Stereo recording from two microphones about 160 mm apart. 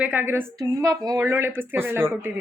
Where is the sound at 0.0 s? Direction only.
10° right (ahead or behind).